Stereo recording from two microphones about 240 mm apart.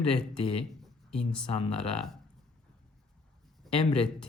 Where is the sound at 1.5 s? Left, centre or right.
Left.